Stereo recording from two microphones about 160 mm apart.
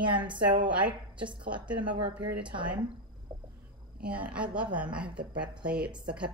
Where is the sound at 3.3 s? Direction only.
15° right (ahead or behind).